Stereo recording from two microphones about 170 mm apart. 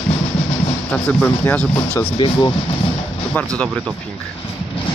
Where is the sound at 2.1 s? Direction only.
30° left (ahead or behind).